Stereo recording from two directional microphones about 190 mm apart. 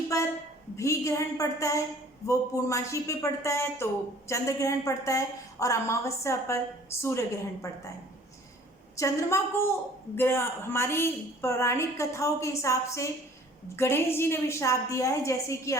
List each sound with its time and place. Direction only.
0.1 s a woman's voice: 15° left (ahead or behind)
9.0 s a woman's voice: 15° left (ahead or behind)